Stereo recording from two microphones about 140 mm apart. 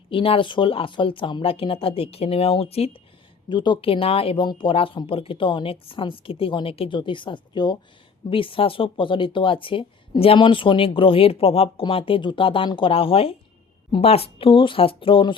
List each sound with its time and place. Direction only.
0.1 s speech: 40° left (ahead or behind)
3.5 s speech: 35° left (ahead or behind)